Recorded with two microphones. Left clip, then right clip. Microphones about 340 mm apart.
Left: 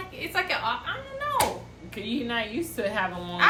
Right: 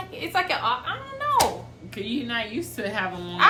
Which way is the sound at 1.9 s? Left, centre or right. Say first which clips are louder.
Right 1 dB; centre.